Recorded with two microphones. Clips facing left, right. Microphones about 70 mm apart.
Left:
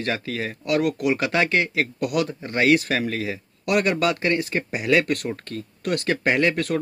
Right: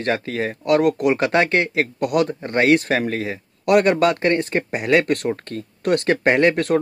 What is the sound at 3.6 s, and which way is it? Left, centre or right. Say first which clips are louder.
Speech: right 6 dB; right.